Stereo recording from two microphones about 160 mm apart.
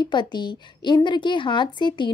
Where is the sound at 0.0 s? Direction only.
30° left (ahead or behind).